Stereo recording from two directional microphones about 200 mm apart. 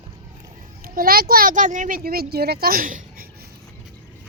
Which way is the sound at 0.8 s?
45° right (ahead or behind).